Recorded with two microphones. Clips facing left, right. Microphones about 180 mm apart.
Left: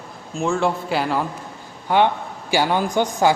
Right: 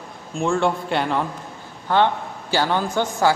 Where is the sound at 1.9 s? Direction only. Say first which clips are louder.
Left 1 dB; 15° left (ahead or behind).